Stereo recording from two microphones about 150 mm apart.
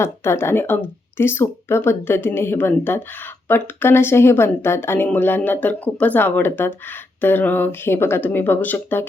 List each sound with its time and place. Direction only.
0.0 s speech: 15° left (ahead or behind)